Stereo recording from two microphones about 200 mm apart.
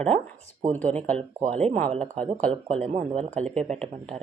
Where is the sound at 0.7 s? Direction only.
5° left (ahead or behind).